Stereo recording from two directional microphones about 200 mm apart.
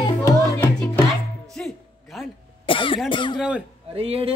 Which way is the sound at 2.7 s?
25° left (ahead or behind).